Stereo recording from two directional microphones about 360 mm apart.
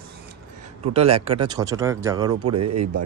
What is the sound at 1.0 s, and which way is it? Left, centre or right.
Speech, centre.